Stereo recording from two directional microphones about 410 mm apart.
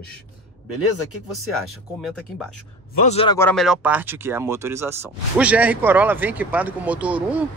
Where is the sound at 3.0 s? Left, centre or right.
Centre.